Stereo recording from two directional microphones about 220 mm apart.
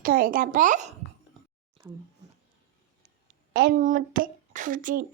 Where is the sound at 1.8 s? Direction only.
15° right (ahead or behind).